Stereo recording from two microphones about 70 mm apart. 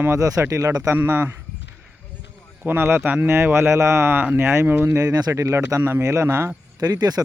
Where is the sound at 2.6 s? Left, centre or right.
Right.